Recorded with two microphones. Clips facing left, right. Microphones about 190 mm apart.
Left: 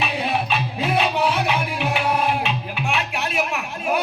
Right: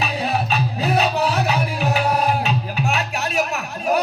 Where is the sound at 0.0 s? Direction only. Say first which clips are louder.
Right 1 dB; 40° right (ahead or behind).